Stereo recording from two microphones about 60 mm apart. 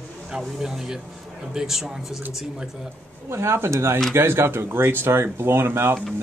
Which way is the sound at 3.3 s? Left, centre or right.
Right.